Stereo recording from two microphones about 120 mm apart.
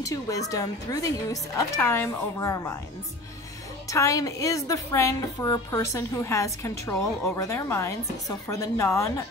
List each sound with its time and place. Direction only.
0.0 s a woman's voice: 25° left (ahead or behind)
3.9 s a woman's voice: 25° left (ahead or behind)